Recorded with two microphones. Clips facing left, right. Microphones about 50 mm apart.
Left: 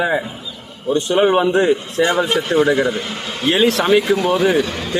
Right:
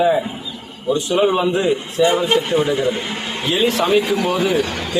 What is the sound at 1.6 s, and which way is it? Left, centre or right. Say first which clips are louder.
Speech: even; left.